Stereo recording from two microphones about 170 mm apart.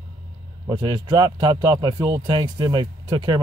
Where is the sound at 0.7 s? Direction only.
25° right (ahead or behind).